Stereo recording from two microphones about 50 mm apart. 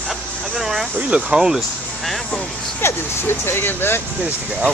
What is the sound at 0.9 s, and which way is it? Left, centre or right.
Speech, right.